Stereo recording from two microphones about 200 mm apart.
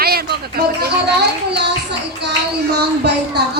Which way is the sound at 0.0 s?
50° right (ahead or behind).